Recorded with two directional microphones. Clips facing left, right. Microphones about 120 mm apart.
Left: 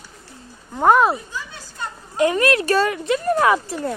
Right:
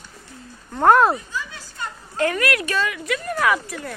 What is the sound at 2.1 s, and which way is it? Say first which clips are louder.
Speech: left 4 dB; 20° left (ahead or behind).